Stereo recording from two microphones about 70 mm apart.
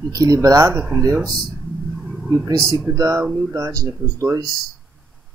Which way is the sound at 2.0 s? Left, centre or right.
Centre.